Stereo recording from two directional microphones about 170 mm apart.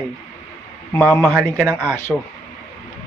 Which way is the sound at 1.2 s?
5° right (ahead or behind).